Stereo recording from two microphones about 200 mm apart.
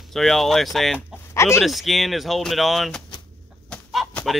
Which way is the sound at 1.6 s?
Centre (ahead or behind).